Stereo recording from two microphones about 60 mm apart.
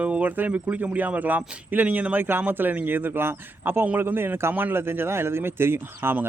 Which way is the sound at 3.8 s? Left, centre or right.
Right.